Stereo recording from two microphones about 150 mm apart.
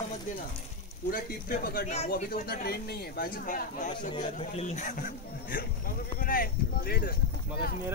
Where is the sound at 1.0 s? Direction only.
75° left (ahead or behind).